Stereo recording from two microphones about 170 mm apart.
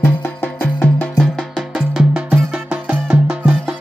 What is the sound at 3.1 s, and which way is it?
Music, 5° right (ahead or behind).